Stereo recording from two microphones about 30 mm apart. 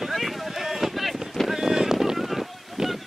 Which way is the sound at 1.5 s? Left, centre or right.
Centre.